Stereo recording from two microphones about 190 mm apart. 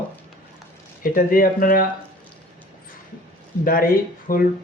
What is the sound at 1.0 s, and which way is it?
Speech, 50° left (ahead or behind).